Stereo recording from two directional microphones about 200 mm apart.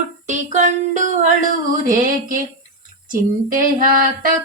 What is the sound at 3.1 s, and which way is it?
Female singing, 45° right (ahead or behind).